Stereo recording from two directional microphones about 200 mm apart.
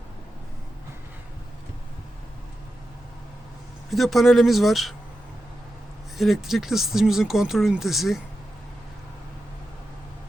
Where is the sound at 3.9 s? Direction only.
Centre (ahead or behind).